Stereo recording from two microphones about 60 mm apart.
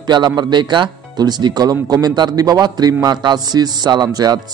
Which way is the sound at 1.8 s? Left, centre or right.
Right.